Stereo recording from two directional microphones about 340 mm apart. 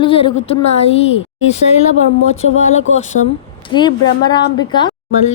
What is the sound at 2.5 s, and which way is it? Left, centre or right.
Speech, left.